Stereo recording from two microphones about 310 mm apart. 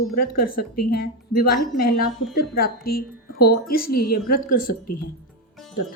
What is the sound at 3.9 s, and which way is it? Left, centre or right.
Speech, left.